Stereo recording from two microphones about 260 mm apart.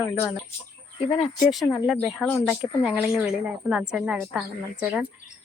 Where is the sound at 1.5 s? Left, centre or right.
Centre.